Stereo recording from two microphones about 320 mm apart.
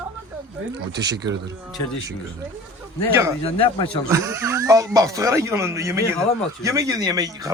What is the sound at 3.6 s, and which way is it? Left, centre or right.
Speech, centre.